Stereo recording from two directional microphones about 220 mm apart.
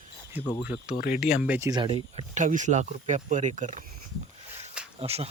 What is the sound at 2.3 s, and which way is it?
Speech, 35° right (ahead or behind).